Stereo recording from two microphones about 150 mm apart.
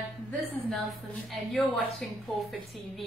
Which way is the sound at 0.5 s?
10° left (ahead or behind).